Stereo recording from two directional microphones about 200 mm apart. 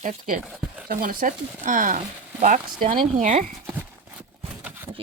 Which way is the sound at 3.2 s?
40° right (ahead or behind).